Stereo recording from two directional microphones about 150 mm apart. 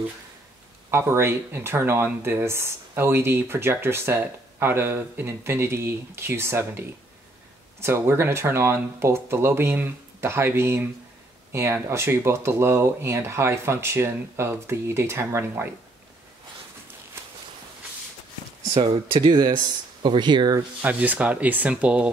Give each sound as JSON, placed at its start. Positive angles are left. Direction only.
{"t": 0.8, "sound": "speech", "side_deg": -15}
{"t": 18.8, "sound": "speech", "side_deg": -30}
{"t": 20.8, "sound": "speech", "side_deg": -10}